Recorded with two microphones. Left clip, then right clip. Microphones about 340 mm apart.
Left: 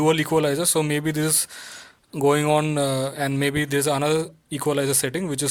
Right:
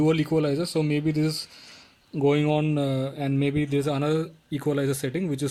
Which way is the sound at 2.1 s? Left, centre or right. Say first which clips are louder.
Left 4 dB; left.